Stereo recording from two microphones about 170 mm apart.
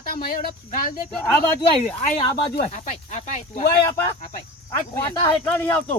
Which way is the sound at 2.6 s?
40° left (ahead or behind).